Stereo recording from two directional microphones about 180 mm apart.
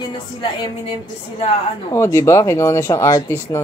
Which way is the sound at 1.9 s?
15° left (ahead or behind).